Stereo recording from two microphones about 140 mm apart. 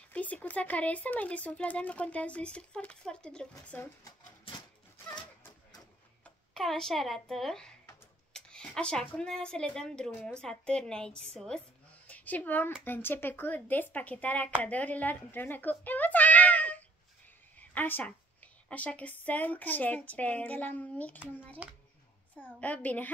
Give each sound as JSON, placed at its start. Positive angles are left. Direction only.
{"t": 0.1, "sound": "speech", "side_deg": 10}
{"t": 4.0, "sound": "a sound", "side_deg": 30}
{"t": 6.5, "sound": "a woman's voice", "side_deg": 0}
{"t": 17.6, "sound": "a sound", "side_deg": 15}
{"t": 18.7, "sound": "speech", "side_deg": 10}
{"t": 21.6, "sound": "speech", "side_deg": -10}
{"t": 22.3, "sound": "speech", "side_deg": 10}